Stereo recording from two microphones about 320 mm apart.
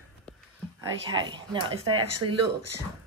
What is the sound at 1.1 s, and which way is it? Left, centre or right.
Speech, centre.